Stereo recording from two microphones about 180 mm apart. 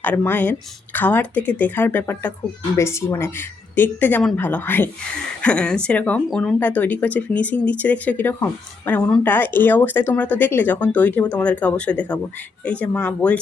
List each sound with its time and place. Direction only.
0.0 s speech: 10° left (ahead or behind)